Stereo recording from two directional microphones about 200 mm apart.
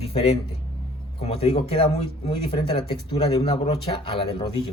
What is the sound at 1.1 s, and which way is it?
Speech, 30° left (ahead or behind).